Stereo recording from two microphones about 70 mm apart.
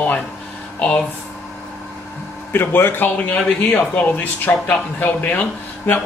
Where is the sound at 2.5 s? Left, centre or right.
Left.